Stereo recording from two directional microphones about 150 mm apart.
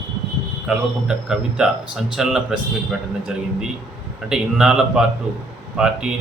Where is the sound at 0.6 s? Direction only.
5° right (ahead or behind).